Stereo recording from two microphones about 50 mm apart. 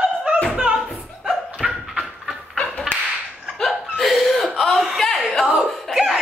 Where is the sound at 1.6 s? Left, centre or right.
Centre.